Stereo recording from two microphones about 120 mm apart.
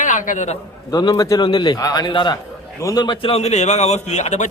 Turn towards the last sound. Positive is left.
turn(degrees=75)  # may be behind; listen again after turning